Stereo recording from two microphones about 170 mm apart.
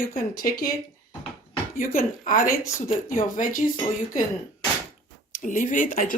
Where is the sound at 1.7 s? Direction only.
55° left (ahead or behind).